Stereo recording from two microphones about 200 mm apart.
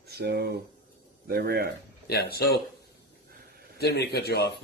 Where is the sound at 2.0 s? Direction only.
55° left (ahead or behind).